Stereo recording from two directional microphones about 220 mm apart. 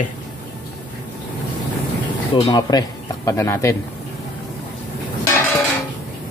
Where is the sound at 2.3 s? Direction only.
20° left (ahead or behind).